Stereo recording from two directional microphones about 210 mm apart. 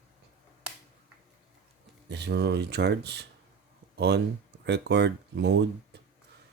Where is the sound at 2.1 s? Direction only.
55° right (ahead or behind).